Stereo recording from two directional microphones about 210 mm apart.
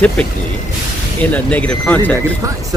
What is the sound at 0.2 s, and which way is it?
Speech, 5° left (ahead or behind).